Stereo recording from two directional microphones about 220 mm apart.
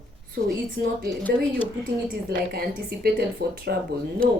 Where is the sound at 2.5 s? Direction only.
45° right (ahead or behind).